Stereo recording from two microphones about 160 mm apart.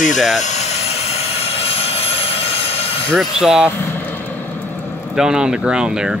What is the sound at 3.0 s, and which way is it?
Speech, centre (ahead or behind).